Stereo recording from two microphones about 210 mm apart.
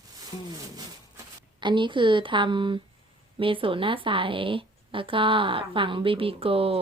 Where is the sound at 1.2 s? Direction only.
20° right (ahead or behind).